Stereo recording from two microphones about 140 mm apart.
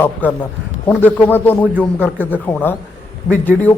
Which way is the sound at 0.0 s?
15° left (ahead or behind).